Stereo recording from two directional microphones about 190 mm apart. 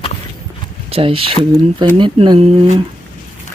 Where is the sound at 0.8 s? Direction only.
30° right (ahead or behind).